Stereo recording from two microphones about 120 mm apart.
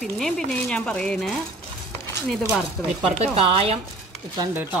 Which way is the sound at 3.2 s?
55° right (ahead or behind).